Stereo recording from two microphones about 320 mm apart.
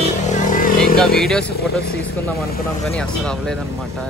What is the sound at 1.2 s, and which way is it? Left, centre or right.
Speech, centre.